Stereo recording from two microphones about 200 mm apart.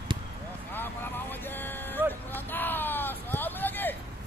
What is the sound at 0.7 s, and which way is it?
Vehicle, 10° left (ahead or behind).